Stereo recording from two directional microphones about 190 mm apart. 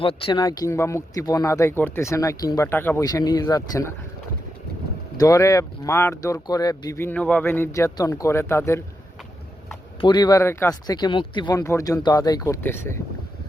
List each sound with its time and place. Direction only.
0.0 s speech: 30° left (ahead or behind)
5.1 s speech: 15° left (ahead or behind)
10.0 s speech: 20° left (ahead or behind)